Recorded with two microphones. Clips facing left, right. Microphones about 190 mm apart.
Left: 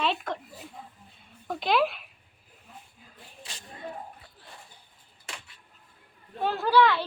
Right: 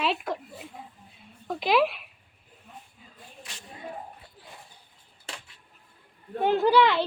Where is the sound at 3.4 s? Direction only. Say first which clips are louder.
Left 1 dB; 30° left (ahead or behind).